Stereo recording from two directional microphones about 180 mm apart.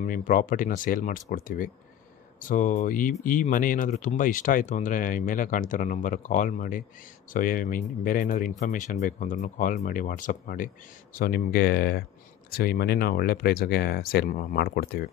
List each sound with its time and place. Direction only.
0.0 s speech: 50° left (ahead or behind)